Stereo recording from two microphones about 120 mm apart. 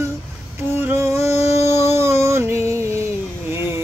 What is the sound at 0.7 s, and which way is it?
Music, 20° right (ahead or behind).